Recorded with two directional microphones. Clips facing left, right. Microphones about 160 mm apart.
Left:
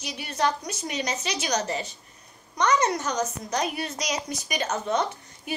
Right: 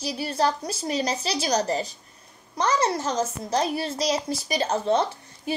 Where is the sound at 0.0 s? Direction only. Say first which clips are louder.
Right 3 dB; 35° right (ahead or behind).